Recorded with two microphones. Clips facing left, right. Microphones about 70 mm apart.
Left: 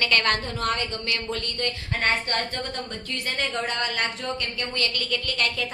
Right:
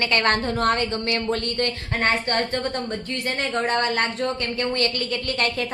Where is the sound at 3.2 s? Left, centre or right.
Right.